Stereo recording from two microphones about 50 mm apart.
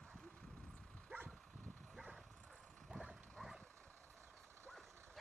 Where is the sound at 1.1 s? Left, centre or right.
Right.